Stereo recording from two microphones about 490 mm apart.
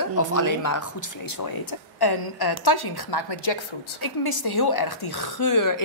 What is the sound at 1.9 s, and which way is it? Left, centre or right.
A woman's voice, left.